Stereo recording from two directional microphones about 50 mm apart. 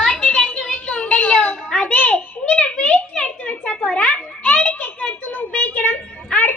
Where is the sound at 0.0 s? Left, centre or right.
Centre.